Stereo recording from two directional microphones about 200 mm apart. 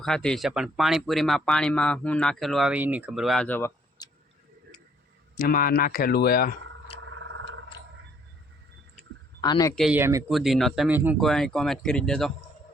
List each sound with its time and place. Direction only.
0.0 s speech: 5° left (ahead or behind)
4.0 s a sound: 20° left (ahead or behind)
5.4 s speech: 45° left (ahead or behind)
7.0 s a sound: 75° right (ahead or behind)
9.4 s speech: 20° left (ahead or behind)
9.7 s speech: centre (ahead or behind)
10.0 s speech: 15° right (ahead or behind)
10.2 s speech: centre (ahead or behind)
11.2 s speech: centre (ahead or behind)